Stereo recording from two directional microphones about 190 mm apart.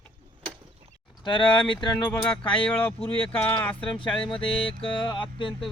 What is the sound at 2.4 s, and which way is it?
Speech, 5° left (ahead or behind).